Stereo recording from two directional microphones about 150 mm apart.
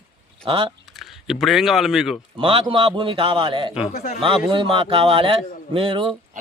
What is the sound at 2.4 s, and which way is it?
A man's voice, 35° right (ahead or behind).